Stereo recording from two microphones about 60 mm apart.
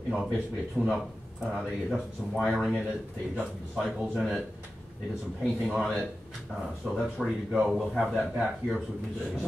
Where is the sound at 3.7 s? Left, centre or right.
Centre.